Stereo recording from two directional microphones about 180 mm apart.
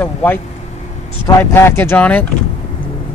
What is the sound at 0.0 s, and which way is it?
Speech, 10° left (ahead or behind).